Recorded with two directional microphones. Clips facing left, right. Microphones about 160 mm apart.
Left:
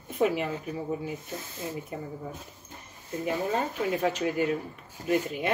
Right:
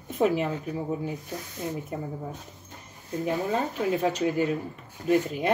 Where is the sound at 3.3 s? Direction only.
40° right (ahead or behind).